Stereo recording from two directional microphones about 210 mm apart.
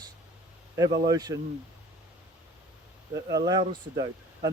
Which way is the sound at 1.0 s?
20° right (ahead or behind).